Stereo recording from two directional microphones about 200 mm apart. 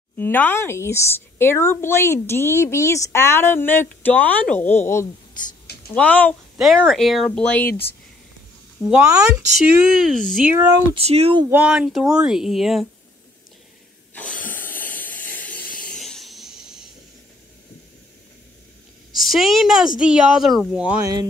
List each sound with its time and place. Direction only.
0.2 s a woman's voice: 10° left (ahead or behind)
8.8 s speech: 5° right (ahead or behind)
10.3 s speech: 10° right (ahead or behind)
11.0 s speech: 30° right (ahead or behind)
11.5 s speech: 5° right (ahead or behind)
14.1 s hiss: 10° left (ahead or behind)
15.9 s a sound: centre (ahead or behind)
19.1 s speech: centre (ahead or behind)
21.0 s speech: 20° right (ahead or behind)